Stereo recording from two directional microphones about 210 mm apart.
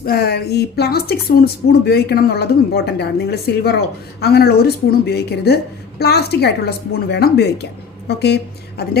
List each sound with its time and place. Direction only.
0.0 s speech: 45° left (ahead or behind)